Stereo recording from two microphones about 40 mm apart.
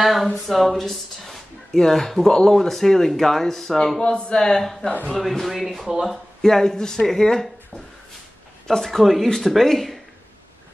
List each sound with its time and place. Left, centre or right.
0.0 s a sound: centre
0.5 s speech: centre
4.0 s speech: left
4.6 s speech: centre
5.9 s speech: centre
6.4 s speech: centre
8.6 s speech: centre